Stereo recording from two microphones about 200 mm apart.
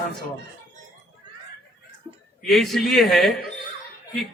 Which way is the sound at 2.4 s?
Centre (ahead or behind).